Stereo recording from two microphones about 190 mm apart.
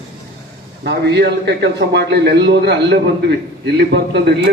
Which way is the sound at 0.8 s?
60° right (ahead or behind).